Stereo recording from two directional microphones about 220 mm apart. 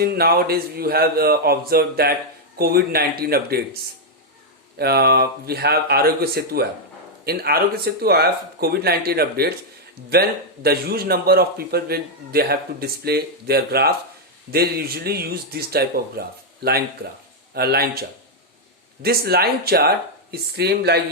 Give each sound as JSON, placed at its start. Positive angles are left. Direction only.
{"t": 0.0, "sound": "a man's voice", "side_deg": -45}
{"t": 4.8, "sound": "a man's voice", "side_deg": -45}
{"t": 19.0, "sound": "a man's voice", "side_deg": -45}